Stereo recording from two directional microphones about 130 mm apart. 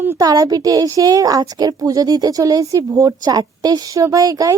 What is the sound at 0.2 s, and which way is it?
A woman's voice, 30° right (ahead or behind).